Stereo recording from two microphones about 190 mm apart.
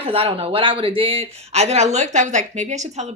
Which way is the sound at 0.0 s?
30° right (ahead or behind).